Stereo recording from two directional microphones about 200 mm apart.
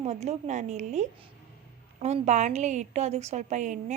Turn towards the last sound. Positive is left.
turn(degrees=-35)  # may be behind; listen again after turning